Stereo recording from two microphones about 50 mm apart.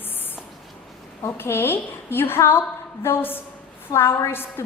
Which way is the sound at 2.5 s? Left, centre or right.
Left.